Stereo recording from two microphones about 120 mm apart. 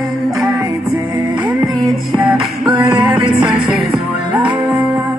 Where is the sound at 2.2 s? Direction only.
10° right (ahead or behind).